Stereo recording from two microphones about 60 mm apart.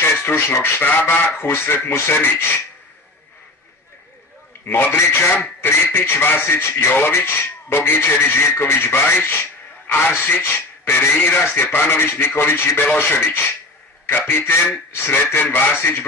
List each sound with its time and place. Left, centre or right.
0.0 s speech: left
1.5 s speech: left
4.6 s speech: left